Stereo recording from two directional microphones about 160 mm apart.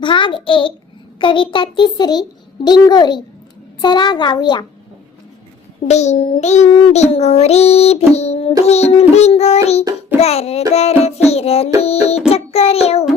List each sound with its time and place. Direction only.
0.0 s child singing: 30° left (ahead or behind)
2.6 s a child's voice: 25° left (ahead or behind)
5.9 s child singing: 45° left (ahead or behind)
10.2 s a sound: 40° left (ahead or behind)
10.8 s child singing: 40° left (ahead or behind)
11.8 s music: 40° left (ahead or behind)
12.3 s child singing: 40° left (ahead or behind)